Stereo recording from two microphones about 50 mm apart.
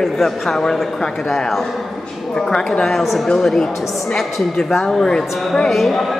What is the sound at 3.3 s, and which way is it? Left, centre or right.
Speech, centre.